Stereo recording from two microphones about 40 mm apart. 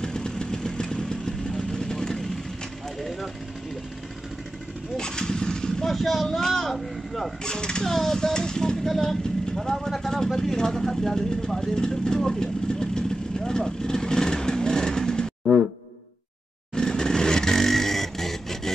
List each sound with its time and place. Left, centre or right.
0.0 s vehicle: centre
4.9 s a sound: centre
5.9 s speech: centre
7.4 s speech: left
7.9 s speech: centre
8.8 s speech: centre
12.3 s vehicle: centre
16.7 s vehicle: centre